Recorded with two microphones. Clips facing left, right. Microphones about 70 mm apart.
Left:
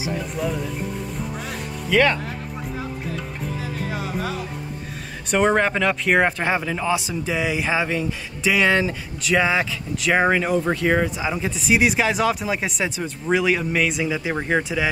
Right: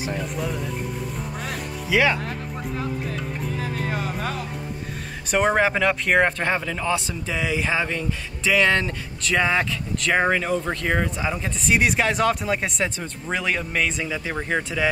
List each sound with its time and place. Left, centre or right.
0.4 s speech: centre
1.4 s music: centre
3.8 s music: right
5.3 s speech: centre